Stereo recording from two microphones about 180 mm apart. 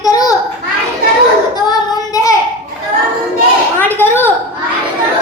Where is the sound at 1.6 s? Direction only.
20° left (ahead or behind).